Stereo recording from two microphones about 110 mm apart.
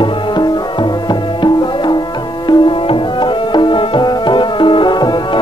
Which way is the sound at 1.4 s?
45° left (ahead or behind).